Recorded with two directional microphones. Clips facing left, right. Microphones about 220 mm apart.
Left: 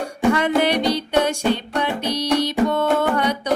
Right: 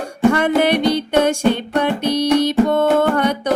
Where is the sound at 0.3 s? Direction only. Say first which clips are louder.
Right 3 dB; 50° right (ahead or behind).